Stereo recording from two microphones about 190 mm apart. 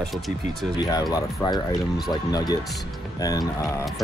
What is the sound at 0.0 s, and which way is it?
Speech, centre (ahead or behind).